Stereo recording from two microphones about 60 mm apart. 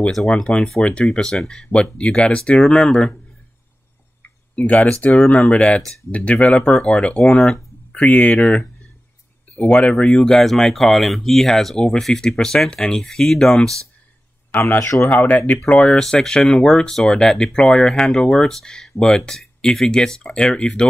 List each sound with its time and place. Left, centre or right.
0.3 s speech: centre
4.2 s tick-tock: left
5.1 s speech: centre
5.8 s speech: centre
6.1 s speech: left; by 13.6 s centre
14.5 s speech: left
14.8 s speech: left
15.0 s speech: left